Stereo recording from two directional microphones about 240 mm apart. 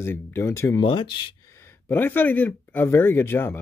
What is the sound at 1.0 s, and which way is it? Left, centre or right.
Speech, left.